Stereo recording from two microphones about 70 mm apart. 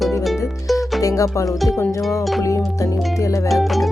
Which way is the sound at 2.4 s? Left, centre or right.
Left.